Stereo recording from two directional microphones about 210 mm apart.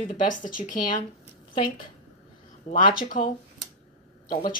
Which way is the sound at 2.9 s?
45° left (ahead or behind).